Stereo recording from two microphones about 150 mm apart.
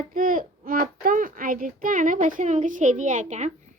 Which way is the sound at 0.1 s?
65° right (ahead or behind).